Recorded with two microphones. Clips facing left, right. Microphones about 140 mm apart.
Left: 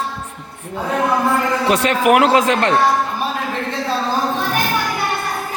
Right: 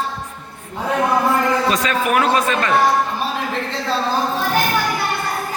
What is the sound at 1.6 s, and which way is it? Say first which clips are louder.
A man's voice: left 4 dB; 70° left (ahead or behind).